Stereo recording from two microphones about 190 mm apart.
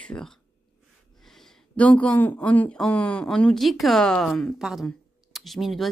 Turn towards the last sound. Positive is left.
turn(degrees=0)  # may be behind; listen again after turning